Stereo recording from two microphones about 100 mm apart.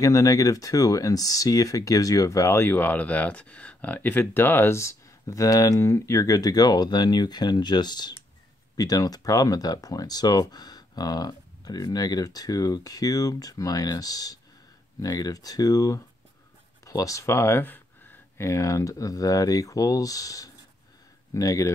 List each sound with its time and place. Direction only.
0.0 s speech: 35° left (ahead or behind)
18.4 s speech: 30° left (ahead or behind)